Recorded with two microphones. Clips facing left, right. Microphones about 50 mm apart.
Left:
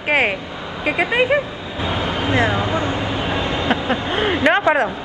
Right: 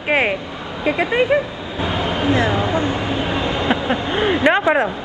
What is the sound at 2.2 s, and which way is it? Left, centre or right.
Speech, left.